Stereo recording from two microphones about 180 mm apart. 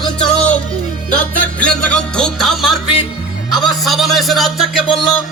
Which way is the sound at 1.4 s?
5° left (ahead or behind).